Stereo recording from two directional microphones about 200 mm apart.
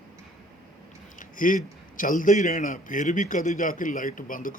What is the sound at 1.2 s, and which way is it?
A man's voice, 40° left (ahead or behind).